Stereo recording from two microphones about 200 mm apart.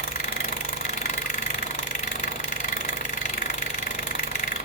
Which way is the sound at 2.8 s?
45° left (ahead or behind).